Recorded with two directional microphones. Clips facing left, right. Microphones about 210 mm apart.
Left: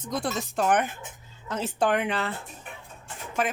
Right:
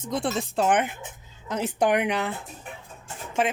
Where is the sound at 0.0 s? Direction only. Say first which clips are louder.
Right 2 dB; 25° right (ahead or behind).